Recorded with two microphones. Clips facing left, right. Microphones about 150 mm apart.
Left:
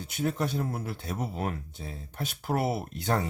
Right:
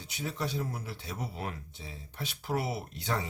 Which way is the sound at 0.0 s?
50° left (ahead or behind).